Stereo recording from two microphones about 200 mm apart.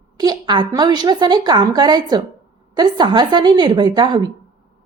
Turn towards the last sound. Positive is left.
turn(degrees=-20)  # may be behind; listen again after turning